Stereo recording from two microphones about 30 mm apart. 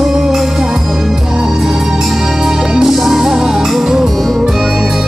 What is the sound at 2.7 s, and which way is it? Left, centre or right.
Music, right.